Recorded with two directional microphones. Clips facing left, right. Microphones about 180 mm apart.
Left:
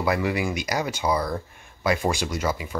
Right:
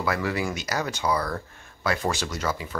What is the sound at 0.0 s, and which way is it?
Speech, 15° left (ahead or behind).